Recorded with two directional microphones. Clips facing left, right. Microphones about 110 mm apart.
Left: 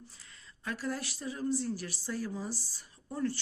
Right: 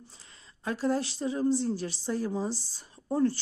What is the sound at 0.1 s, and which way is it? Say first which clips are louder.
Speech: right 1 dB; 25° right (ahead or behind).